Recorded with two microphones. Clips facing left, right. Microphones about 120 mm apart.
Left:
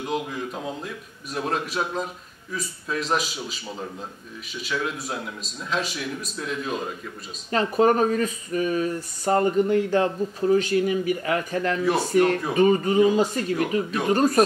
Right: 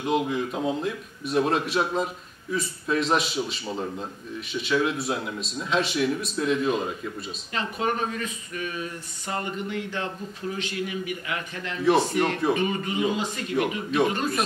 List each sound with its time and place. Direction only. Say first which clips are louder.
0.0 s a man's voice: right 3 dB; centre (ahead or behind)
7.5 s speech: left 8 dB; 40° left (ahead or behind)
11.8 s a man's voice: right 6 dB; centre (ahead or behind)
12.5 s speech: left 8 dB; 40° left (ahead or behind)
13.6 s a man's voice: right 4 dB; centre (ahead or behind)
14.1 s speech: left 8 dB; 40° left (ahead or behind)